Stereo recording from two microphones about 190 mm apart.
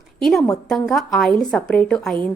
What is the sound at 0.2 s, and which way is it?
A woman's voice, centre (ahead or behind).